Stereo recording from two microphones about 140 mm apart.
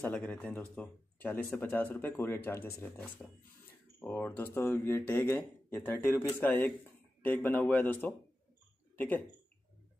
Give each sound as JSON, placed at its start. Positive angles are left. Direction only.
{"t": 0.0, "sound": "speech", "side_deg": 10}